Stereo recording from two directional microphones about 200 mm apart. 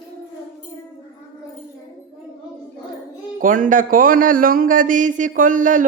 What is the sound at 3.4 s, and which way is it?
Speech, 40° right (ahead or behind).